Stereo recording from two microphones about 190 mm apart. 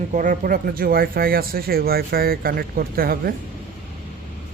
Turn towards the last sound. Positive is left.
turn(degrees=-50)  # may be behind; listen again after turning